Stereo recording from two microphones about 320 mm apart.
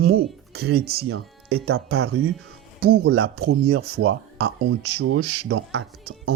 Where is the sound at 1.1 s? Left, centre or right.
Right.